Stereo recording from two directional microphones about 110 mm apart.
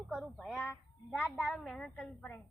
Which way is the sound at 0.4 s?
Centre (ahead or behind).